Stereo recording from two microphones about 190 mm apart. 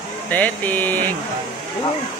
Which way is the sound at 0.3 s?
10° left (ahead or behind).